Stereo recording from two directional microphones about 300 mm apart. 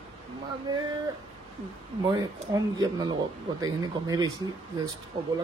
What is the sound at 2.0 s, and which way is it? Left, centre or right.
Speech, centre.